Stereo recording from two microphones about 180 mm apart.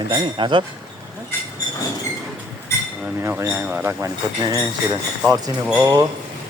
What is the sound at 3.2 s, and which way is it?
Speech, 10° right (ahead or behind).